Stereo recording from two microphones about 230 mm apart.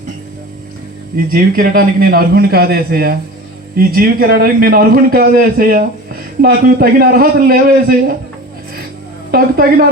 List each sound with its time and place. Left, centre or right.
1.1 s a man's voice: right
9.3 s a man's voice: right